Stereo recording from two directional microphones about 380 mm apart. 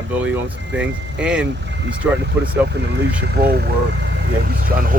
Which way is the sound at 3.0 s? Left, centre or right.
Right.